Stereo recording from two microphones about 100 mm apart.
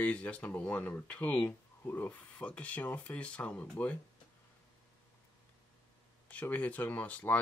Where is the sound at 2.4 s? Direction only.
15° left (ahead or behind).